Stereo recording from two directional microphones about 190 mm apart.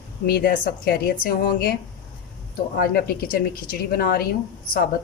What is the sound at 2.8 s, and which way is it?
Speech, 50° left (ahead or behind).